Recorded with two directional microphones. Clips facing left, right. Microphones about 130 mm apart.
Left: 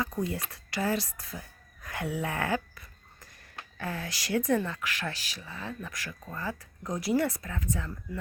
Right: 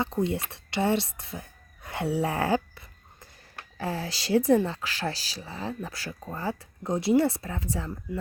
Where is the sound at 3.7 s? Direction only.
30° right (ahead or behind).